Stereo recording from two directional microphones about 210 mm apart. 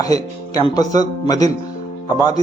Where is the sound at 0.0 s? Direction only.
15° left (ahead or behind).